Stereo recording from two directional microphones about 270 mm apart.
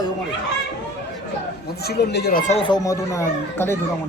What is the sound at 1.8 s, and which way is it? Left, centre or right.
Speech, left.